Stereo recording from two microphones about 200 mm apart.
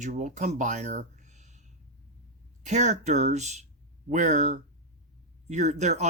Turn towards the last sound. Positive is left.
turn(degrees=-35)  # may be behind; listen again after turning